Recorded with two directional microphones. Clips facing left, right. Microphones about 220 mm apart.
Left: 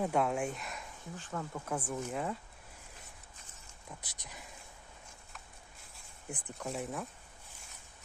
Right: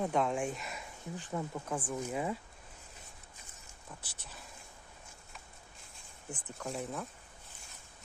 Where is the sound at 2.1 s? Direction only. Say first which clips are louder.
Right 3 dB; 5° right (ahead or behind).